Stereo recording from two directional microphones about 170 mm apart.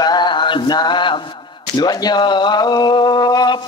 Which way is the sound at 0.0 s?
25° left (ahead or behind).